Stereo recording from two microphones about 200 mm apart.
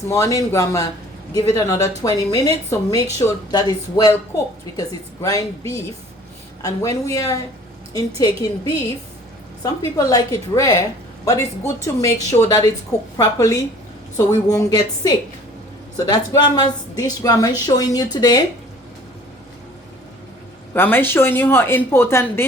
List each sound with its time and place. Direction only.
0.1 s a woman's voice: 15° left (ahead or behind)
6.6 s a woman's voice: 15° left (ahead or behind)
9.6 s a woman's voice: 20° left (ahead or behind)
20.7 s a woman's voice: 10° left (ahead or behind)